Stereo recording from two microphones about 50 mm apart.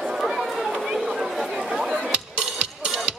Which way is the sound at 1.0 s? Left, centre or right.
Centre.